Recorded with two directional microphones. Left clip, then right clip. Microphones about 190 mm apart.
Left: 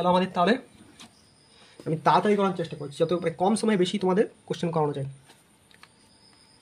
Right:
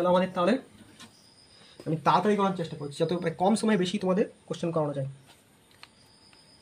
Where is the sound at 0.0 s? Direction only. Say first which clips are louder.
Left 2 dB; 55° left (ahead or behind).